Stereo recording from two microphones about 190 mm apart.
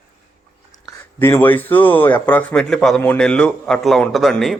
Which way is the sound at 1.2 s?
10° left (ahead or behind).